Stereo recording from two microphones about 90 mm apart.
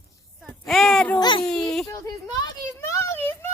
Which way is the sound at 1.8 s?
40° left (ahead or behind).